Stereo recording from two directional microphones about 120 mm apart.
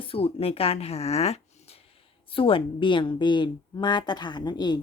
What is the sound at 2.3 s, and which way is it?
A woman's voice, 45° left (ahead or behind).